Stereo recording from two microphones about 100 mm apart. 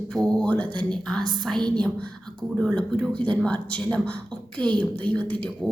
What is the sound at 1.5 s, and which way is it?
Speech, 45° right (ahead or behind).